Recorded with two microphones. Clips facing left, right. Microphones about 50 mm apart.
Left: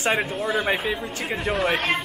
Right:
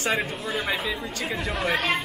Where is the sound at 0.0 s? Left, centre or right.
Centre.